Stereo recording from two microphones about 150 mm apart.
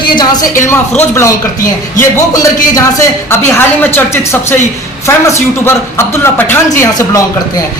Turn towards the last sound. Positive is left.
turn(degrees=20)  # may be behind; listen again after turning